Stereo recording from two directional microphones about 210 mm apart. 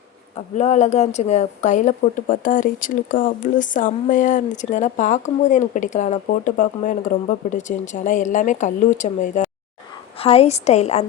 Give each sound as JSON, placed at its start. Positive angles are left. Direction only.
{"t": 0.3, "sound": "a woman's voice", "side_deg": 30}